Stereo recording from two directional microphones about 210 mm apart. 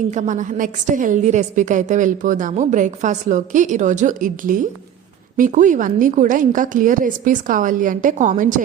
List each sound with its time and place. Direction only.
0.1 s a woman's voice: 35° right (ahead or behind)